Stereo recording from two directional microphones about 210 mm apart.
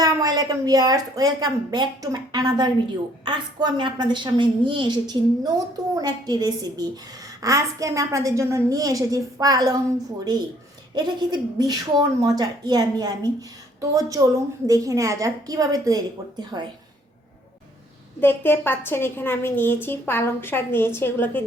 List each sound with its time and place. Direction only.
0.0 s a woman's voice: 20° right (ahead or behind)
10.9 s a woman's voice: 20° right (ahead or behind)
18.2 s a woman's voice: 10° left (ahead or behind)